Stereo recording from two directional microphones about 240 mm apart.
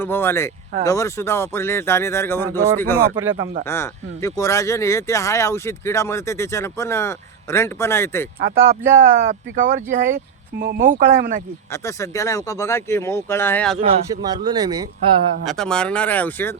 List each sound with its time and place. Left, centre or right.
0.0 s speech: centre
8.4 s speech: right
11.7 s speech: centre
14.3 s speech: centre
15.4 s speech: centre